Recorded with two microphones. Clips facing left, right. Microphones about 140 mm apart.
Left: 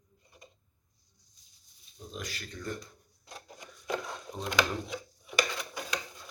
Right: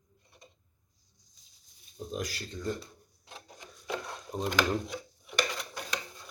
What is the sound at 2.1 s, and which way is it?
Speech, 40° right (ahead or behind).